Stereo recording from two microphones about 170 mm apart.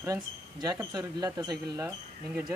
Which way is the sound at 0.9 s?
20° right (ahead or behind).